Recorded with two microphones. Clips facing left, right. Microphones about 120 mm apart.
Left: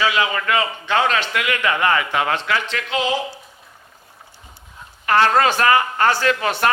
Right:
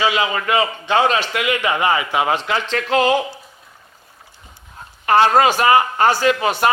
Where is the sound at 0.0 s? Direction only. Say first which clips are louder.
Right 1 dB; 25° right (ahead or behind).